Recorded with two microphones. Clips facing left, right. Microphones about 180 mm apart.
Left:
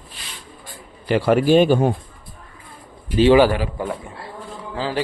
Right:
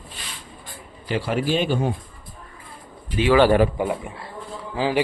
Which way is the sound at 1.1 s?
55° left (ahead or behind).